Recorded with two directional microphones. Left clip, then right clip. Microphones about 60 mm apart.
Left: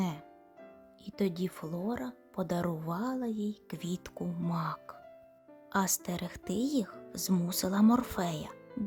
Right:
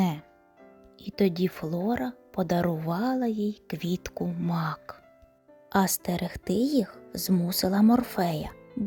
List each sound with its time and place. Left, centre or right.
0.0 s music: right
1.0 s speech: right
2.9 s speech: right
4.2 s speech: centre
4.4 s speech: right
5.7 s speech: right